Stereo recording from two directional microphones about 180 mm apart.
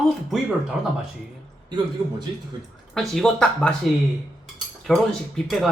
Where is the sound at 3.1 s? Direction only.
5° left (ahead or behind).